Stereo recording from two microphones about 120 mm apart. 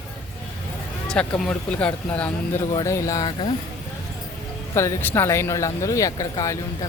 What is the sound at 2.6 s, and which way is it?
Speech, 35° left (ahead or behind).